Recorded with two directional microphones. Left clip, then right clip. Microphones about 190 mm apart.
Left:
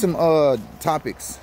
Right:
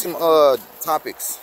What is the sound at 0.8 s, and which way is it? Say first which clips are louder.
Speech: right 1 dB; 10° left (ahead or behind).